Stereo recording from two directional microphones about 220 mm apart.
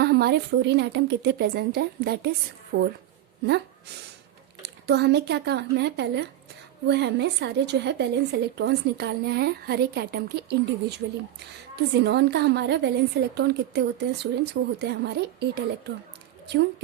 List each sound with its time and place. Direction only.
0.0 s a woman's voice: 45° right (ahead or behind)
4.6 s a woman's voice: 50° right (ahead or behind)
11.9 s a woman's voice: 50° right (ahead or behind)